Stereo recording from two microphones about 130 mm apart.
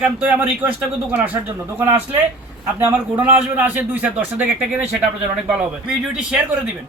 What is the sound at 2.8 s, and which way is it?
A woman's voice, 10° right (ahead or behind).